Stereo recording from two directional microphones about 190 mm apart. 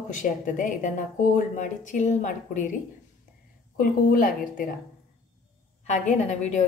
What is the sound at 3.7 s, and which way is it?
Speech, 45° left (ahead or behind).